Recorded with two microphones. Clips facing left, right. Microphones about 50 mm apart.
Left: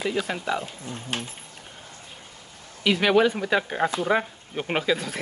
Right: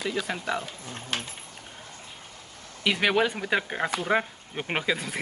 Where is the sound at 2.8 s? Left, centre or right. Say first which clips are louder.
Left 4 dB; centre.